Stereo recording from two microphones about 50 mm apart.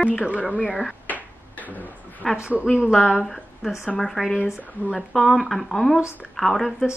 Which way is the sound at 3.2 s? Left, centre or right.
Centre.